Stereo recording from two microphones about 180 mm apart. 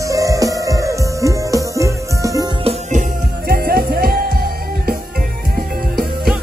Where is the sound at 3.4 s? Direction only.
55° right (ahead or behind).